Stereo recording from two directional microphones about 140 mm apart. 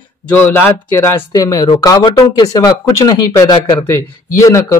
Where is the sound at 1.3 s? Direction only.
30° left (ahead or behind).